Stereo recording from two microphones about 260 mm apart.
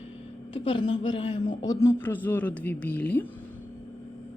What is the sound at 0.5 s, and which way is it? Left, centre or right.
A woman's voice, centre.